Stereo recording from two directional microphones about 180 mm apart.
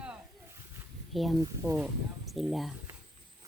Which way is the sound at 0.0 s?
10° right (ahead or behind).